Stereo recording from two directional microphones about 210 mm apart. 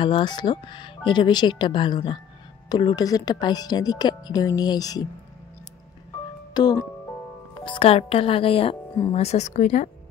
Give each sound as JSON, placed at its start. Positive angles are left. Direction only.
{"t": 0.0, "sound": "speech", "side_deg": 20}
{"t": 6.5, "sound": "speech", "side_deg": 20}